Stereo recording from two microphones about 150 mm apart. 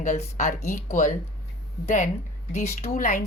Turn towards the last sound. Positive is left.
turn(degrees=60)  # may be behind; listen again after turning